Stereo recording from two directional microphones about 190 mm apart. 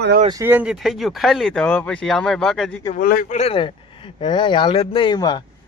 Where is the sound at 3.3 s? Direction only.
30° left (ahead or behind).